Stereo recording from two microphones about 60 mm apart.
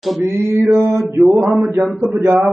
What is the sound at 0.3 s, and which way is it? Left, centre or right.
Speech, right.